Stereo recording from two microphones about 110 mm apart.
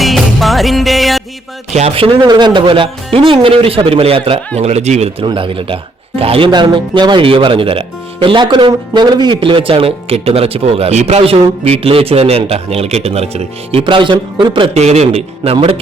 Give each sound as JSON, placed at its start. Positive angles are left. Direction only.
{"t": 0.0, "sound": "music", "side_deg": 0}
{"t": 1.7, "sound": "a man's voice", "side_deg": -75}
{"t": 2.1, "sound": "speech", "side_deg": -40}
{"t": 5.2, "sound": "speech", "side_deg": -55}
{"t": 6.5, "sound": "speech", "side_deg": -45}
{"t": 14.7, "sound": "a man's voice", "side_deg": -80}